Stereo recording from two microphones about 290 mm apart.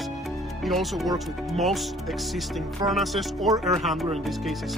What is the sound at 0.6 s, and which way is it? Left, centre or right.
Speech, centre.